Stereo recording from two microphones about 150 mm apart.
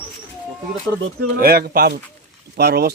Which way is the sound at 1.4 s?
90° right.